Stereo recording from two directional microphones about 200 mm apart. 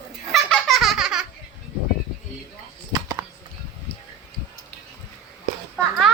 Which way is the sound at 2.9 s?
20° right (ahead or behind).